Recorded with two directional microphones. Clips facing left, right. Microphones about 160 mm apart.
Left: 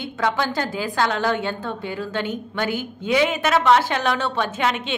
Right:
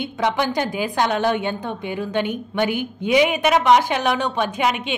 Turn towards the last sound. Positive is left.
turn(degrees=-15)  # may be behind; listen again after turning